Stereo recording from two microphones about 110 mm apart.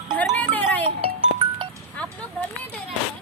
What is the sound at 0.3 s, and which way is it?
Music, 15° left (ahead or behind).